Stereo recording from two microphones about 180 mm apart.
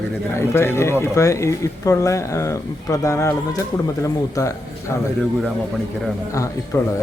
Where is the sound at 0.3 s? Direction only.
15° left (ahead or behind).